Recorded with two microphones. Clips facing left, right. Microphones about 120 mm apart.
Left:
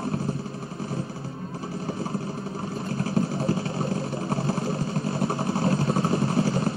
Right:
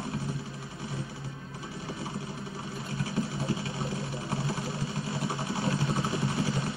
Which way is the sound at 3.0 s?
55° left (ahead or behind).